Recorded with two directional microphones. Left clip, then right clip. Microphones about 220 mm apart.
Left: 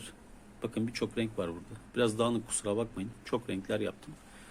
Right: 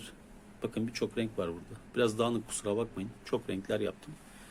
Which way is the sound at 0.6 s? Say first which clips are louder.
Even; centre (ahead or behind).